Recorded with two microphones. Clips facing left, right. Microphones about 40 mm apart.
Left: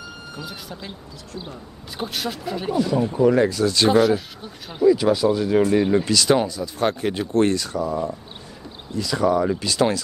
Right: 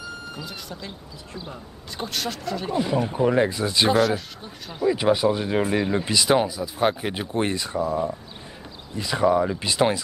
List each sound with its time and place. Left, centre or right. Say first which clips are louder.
0.4 s speech: left 1 dB; centre
2.0 s speech: left 2 dB; centre
2.7 s speech: left 3 dB; right
3.9 s speech: left 3 dB; centre
4.8 s speech: left 3 dB; right
8.9 s speech: even; right